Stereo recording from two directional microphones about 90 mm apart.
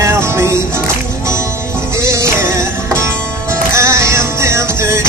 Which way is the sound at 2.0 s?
35° right (ahead or behind).